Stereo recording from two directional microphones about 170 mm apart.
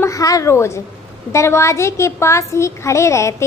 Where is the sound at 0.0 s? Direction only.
20° left (ahead or behind).